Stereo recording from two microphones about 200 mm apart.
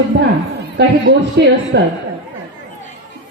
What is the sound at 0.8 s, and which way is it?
Speech, 60° right (ahead or behind).